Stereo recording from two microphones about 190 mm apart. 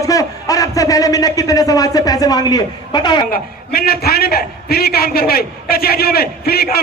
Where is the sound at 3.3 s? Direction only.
50° left (ahead or behind).